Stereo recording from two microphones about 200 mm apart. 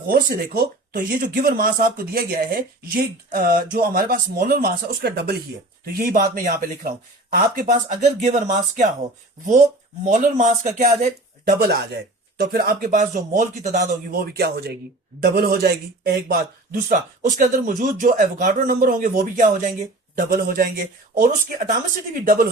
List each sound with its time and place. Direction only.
0.1 s speech: 45° right (ahead or behind)
10.1 s speech: 40° right (ahead or behind)
11.6 s speech: 55° right (ahead or behind)